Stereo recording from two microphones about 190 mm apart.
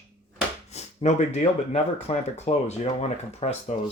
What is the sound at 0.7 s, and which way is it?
Speech, 35° left (ahead or behind).